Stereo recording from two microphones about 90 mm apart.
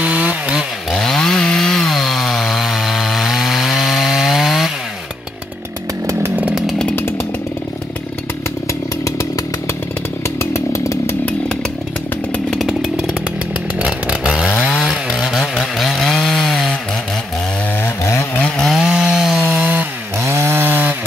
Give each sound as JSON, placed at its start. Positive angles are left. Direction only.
{"t": 0.0, "sound": "chainsaw", "side_deg": -15}
{"t": 0.9, "sound": "chainsaw", "side_deg": 5}
{"t": 10.4, "sound": "chainsaw", "side_deg": 30}
{"t": 12.4, "sound": "chainsaw", "side_deg": 5}
{"t": 13.7, "sound": "chainsaw", "side_deg": -10}
{"t": 17.8, "sound": "chainsaw", "side_deg": 30}
{"t": 18.4, "sound": "chainsaw", "side_deg": 5}
{"t": 18.8, "sound": "chainsaw", "side_deg": -10}
{"t": 20.2, "sound": "chainsaw", "side_deg": -30}